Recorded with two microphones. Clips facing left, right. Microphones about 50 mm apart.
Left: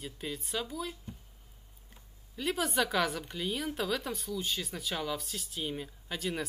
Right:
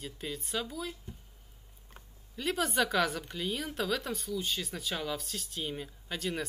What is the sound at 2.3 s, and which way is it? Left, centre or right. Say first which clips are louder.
Speech: right 1 dB; centre.